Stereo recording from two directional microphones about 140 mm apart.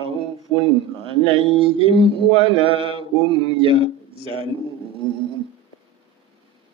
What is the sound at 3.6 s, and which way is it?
Speech, 40° right (ahead or behind).